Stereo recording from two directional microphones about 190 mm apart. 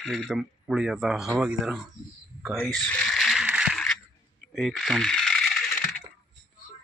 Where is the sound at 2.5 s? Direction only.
5° left (ahead or behind).